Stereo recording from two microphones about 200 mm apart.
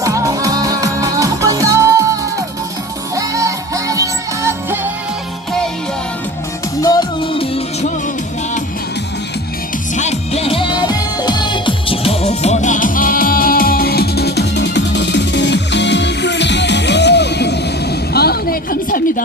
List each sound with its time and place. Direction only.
0.0 s music: 15° right (ahead or behind)
3.2 s music: 15° right (ahead or behind)
6.8 s music: 25° left (ahead or behind)
9.9 s music: 35° left (ahead or behind)